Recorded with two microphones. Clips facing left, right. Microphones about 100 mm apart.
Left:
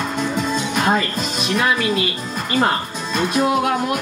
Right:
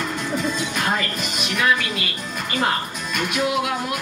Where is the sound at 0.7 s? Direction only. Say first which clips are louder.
Left 5 dB; 25° left (ahead or behind).